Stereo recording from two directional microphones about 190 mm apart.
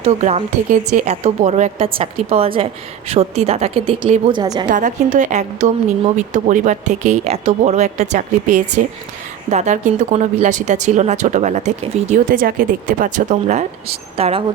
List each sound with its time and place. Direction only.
0.0 s speech: 35° right (ahead or behind)
4.7 s speech: 40° right (ahead or behind)